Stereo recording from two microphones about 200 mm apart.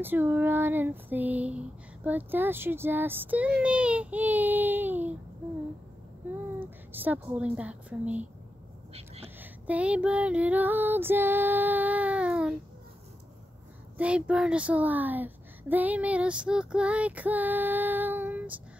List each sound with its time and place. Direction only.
0.0 s female singing: 10° right (ahead or behind)
6.6 s a woman's voice: 10° right (ahead or behind)
8.9 s whispering: 30° right (ahead or behind)
9.4 s female singing: 5° right (ahead or behind)
13.9 s female singing: 5° right (ahead or behind)